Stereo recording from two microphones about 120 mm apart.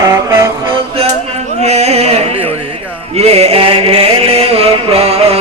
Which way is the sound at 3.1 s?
60° right (ahead or behind).